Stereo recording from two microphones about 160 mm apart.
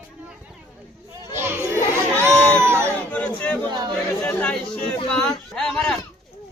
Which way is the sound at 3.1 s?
10° left (ahead or behind).